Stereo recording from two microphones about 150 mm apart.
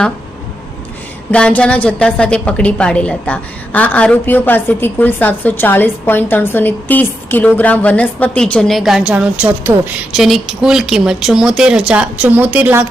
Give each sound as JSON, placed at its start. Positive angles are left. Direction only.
{"t": 1.3, "sound": "a woman's voice", "side_deg": 5}